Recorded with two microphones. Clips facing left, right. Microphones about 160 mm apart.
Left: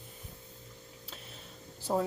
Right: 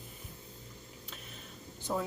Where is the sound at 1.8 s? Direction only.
35° left (ahead or behind).